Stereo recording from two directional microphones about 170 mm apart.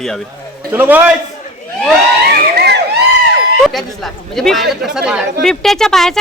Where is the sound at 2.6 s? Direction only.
80° right.